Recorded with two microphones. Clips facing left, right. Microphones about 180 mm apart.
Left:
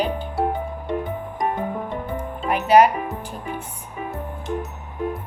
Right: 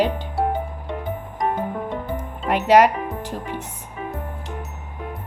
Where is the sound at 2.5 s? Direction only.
90° right.